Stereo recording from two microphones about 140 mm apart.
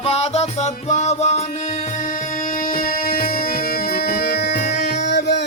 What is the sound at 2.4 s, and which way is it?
Music, 85° left.